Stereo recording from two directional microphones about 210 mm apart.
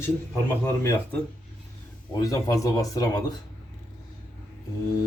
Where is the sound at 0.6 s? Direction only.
10° left (ahead or behind).